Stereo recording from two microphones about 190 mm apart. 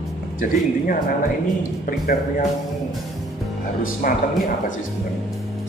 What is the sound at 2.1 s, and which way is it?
Speech, 50° left (ahead or behind).